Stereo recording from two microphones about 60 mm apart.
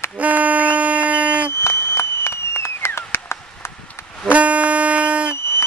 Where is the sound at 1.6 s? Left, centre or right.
Left.